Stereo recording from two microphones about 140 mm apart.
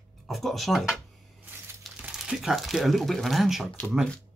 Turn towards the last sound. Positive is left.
turn(degrees=0)  # may be behind; listen again after turning